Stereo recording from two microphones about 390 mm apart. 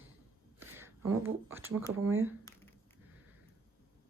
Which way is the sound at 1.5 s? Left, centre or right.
Centre.